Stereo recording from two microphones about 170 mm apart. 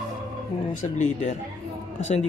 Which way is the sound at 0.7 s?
45° left (ahead or behind).